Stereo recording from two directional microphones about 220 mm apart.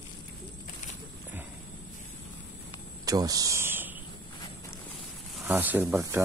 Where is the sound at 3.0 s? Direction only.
15° right (ahead or behind).